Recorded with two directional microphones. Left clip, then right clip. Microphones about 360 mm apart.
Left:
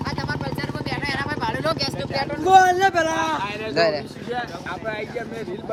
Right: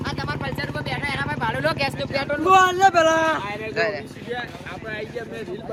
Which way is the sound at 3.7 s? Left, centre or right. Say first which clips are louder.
Left 5 dB; centre.